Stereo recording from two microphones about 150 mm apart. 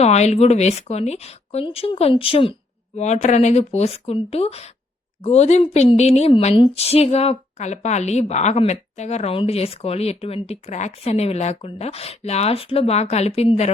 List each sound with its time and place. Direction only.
0.0 s a woman's voice: 45° left (ahead or behind)
3.0 s a woman's voice: 50° left (ahead or behind)